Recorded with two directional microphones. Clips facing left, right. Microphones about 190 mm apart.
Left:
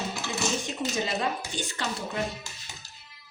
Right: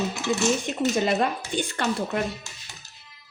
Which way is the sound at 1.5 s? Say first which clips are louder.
Right 7 dB; 55° right (ahead or behind).